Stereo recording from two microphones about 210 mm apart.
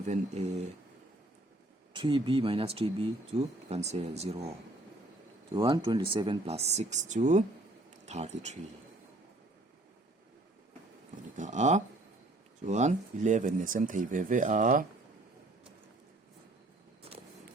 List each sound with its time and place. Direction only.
0.0 s speech: 35° right (ahead or behind)
1.9 s speech: 25° right (ahead or behind)
5.5 s speech: 20° right (ahead or behind)
11.3 s speech: 35° right (ahead or behind)